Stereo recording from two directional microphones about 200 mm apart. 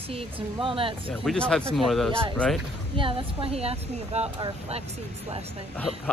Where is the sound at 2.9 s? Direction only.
25° right (ahead or behind).